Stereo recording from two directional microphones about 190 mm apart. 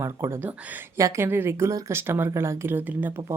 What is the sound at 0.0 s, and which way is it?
Speech, 15° right (ahead or behind).